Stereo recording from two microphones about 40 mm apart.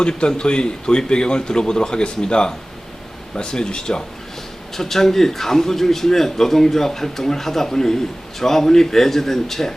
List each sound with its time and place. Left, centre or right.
0.0 s a man's voice: left
4.7 s a man's voice: centre